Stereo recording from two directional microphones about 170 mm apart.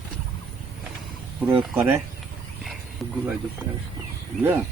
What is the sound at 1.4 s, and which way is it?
Speech, 10° right (ahead or behind).